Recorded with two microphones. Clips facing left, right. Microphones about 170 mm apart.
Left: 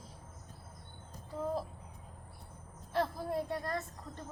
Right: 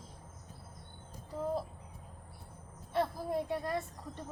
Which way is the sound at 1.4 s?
Centre (ahead or behind).